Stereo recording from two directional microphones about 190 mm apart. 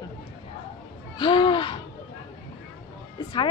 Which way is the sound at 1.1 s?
25° left (ahead or behind).